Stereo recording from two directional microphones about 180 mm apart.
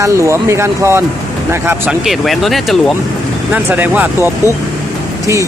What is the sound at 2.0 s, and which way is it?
Speech, centre (ahead or behind).